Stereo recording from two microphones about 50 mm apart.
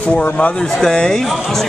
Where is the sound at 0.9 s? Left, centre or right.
Centre.